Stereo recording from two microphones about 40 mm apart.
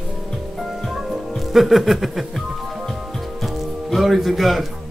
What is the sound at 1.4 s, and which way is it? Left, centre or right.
Music, centre.